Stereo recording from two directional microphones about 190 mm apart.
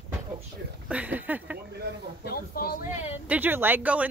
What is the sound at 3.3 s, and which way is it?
Speech, 10° right (ahead or behind).